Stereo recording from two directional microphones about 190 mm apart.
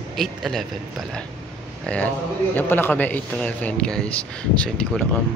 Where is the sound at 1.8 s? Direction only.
5° left (ahead or behind).